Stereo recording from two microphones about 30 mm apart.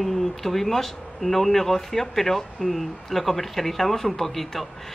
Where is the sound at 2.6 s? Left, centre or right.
Left.